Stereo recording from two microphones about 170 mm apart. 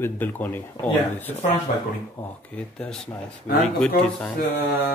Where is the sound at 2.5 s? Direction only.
10° left (ahead or behind).